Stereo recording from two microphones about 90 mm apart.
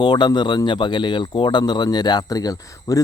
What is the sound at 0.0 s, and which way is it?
Speech, 55° left (ahead or behind).